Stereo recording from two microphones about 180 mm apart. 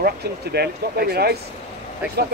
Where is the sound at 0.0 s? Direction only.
60° right (ahead or behind).